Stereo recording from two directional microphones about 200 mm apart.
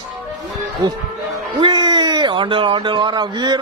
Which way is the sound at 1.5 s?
20° right (ahead or behind).